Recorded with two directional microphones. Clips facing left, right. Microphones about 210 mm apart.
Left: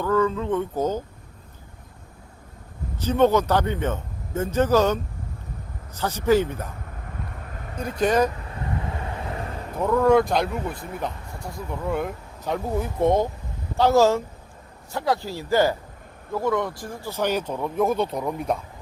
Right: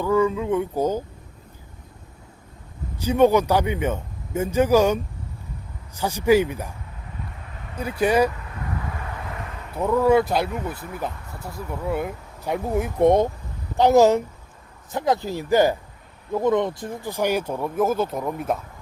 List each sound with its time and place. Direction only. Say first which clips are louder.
0.0 s speech: right 2 dB; 10° right (ahead or behind)
3.0 s speech: right 2 dB; 10° right (ahead or behind)
7.4 s vehicle: left 2 dB; 45° left (ahead or behind)
7.8 s speech: right 1 dB; 10° right (ahead or behind)
8.6 s vehicle: left 2 dB; 25° left (ahead or behind)
9.7 s speech: even; 10° right (ahead or behind)